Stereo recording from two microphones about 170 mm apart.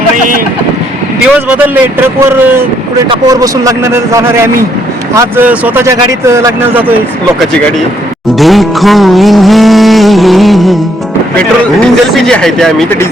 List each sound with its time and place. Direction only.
1.2 s speech: 5° right (ahead or behind)
8.4 s music: centre (ahead or behind)
11.3 s speech: 5° left (ahead or behind)